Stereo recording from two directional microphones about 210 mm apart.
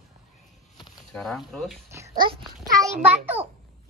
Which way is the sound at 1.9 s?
15° right (ahead or behind).